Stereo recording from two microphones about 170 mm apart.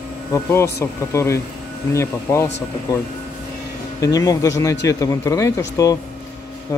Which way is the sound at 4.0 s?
20° left (ahead or behind).